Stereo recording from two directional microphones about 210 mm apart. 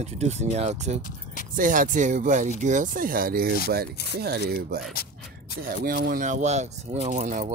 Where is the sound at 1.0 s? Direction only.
40° left (ahead or behind).